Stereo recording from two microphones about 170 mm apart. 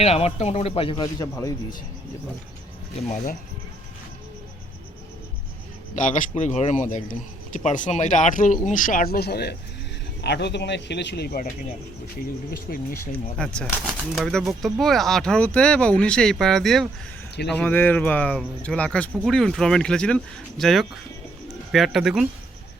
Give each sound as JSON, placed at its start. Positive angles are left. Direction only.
{"t": 0.0, "sound": "speech", "side_deg": 35}
{"t": 1.0, "sound": "a man's voice", "side_deg": 20}
{"t": 5.9, "sound": "speech", "side_deg": 45}
{"t": 10.2, "sound": "a man's voice", "side_deg": 85}
{"t": 12.5, "sound": "speech", "side_deg": 60}
{"t": 13.4, "sound": "speech", "side_deg": 5}